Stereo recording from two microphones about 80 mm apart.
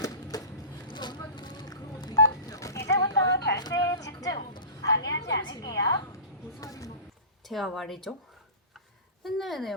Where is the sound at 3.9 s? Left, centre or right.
Left.